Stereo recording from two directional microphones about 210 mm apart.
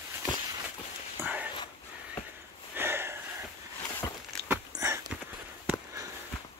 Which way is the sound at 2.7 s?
10° right (ahead or behind).